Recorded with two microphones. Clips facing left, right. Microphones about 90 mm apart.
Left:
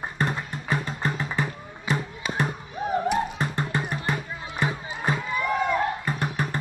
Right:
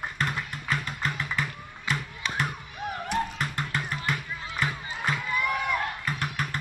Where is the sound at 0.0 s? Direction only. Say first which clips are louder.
Left 3 dB; 20° left (ahead or behind).